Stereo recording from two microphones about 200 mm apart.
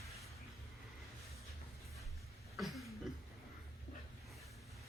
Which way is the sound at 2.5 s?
Centre (ahead or behind).